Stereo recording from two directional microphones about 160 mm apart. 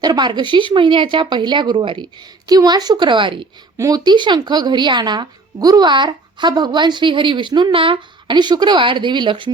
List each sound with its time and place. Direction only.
0.0 s a woman's voice: 25° right (ahead or behind)